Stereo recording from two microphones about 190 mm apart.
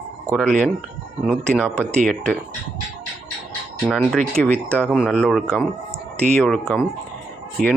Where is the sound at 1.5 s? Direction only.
5° left (ahead or behind).